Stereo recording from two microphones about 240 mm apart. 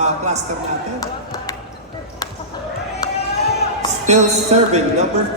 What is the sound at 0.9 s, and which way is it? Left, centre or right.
Basketball bounce, centre.